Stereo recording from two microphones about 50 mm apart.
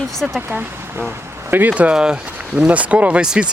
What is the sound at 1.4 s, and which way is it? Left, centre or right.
Speech, right.